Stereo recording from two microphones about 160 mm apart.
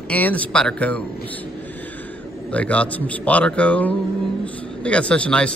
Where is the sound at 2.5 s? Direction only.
10° left (ahead or behind).